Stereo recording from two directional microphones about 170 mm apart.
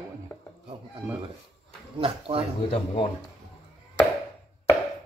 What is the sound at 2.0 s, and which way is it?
Speech, 35° right (ahead or behind).